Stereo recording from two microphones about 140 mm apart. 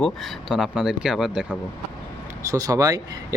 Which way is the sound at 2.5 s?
25° right (ahead or behind).